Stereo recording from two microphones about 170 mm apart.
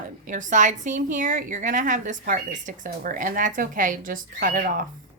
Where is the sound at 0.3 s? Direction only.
50° right (ahead or behind).